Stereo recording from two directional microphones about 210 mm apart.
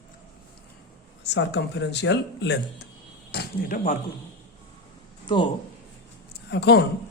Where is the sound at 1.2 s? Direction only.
55° left (ahead or behind).